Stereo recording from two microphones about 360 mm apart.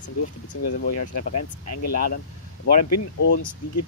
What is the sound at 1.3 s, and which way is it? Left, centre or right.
Speech, left.